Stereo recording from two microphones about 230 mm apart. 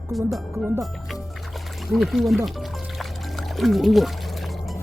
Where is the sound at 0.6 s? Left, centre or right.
Centre.